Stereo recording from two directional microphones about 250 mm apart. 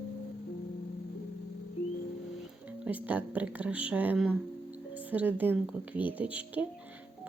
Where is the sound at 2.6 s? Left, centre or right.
Centre.